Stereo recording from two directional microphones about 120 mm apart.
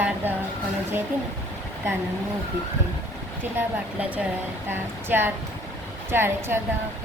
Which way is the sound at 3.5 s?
10° right (ahead or behind).